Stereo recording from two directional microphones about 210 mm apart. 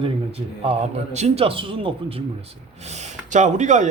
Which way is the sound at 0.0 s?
25° right (ahead or behind).